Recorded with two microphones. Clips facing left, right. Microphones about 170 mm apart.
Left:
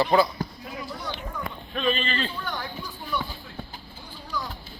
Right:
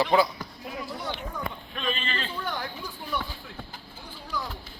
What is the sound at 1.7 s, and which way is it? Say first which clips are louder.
Speech: left 7 dB; 35° left (ahead or behind).